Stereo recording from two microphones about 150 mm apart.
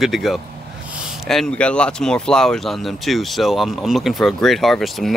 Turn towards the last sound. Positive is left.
turn(degrees=0)  # may be behind; listen again after turning